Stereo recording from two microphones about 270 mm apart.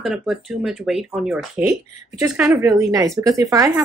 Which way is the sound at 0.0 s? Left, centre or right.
Centre.